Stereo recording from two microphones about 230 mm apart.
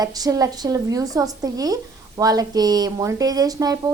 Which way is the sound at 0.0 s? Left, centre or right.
Centre.